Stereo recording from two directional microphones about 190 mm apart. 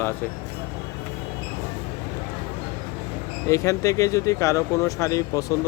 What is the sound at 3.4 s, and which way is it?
Speech, 15° left (ahead or behind).